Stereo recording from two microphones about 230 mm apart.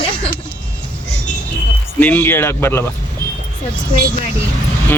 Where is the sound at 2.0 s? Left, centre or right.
Centre.